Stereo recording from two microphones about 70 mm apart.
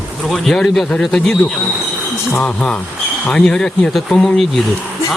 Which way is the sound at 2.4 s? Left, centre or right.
Centre.